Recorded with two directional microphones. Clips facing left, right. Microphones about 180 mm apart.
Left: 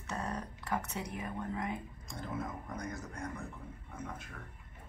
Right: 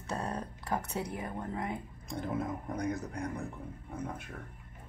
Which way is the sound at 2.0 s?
60° right (ahead or behind).